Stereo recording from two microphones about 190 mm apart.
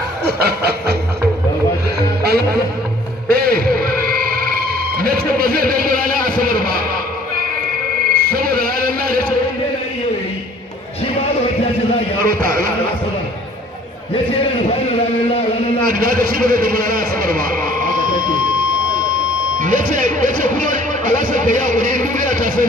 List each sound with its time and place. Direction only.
0.2 s a sound: 55° right (ahead or behind)
3.3 s music: 55° right (ahead or behind)
8.1 s music: 50° right (ahead or behind)
12.3 s speech: 50° right (ahead or behind)
15.8 s a man's voice: 50° right (ahead or behind)
19.6 s music: 45° right (ahead or behind)